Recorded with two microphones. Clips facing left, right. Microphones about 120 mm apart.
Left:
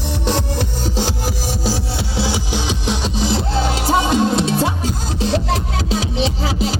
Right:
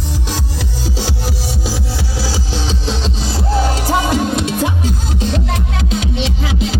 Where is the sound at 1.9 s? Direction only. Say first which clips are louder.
Left 1 dB; 25° left (ahead or behind).